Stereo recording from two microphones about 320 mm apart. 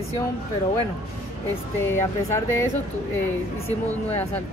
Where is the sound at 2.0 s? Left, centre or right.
Centre.